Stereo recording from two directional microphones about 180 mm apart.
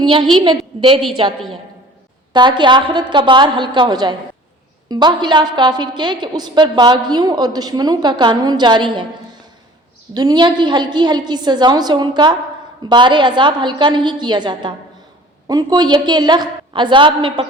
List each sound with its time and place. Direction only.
0.0 s a woman's voice: 25° right (ahead or behind)